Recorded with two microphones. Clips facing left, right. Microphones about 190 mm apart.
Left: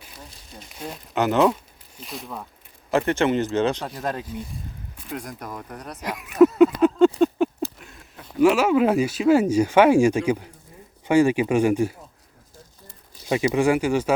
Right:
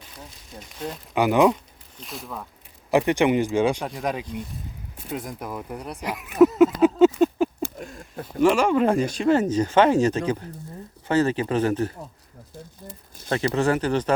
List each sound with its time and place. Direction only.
0.8 s speech: 10° left (ahead or behind)
1.1 s speech: 10° right (ahead or behind)
2.0 s speech: centre (ahead or behind)
2.9 s speech: 15° right (ahead or behind)
6.0 s a sound: centre (ahead or behind)
7.6 s a sound: 45° right (ahead or behind)
8.4 s speech: 5° left (ahead or behind)
13.2 s speech: 10° left (ahead or behind)